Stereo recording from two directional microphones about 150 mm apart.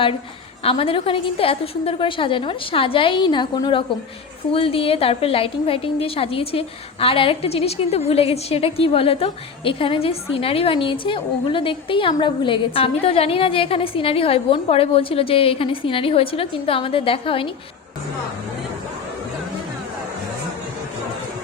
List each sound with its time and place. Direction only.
0.6 s a woman's voice: 40° left (ahead or behind)